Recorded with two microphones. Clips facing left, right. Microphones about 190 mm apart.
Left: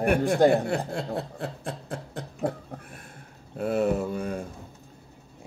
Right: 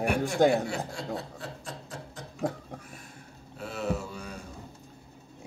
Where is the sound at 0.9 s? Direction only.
55° left (ahead or behind).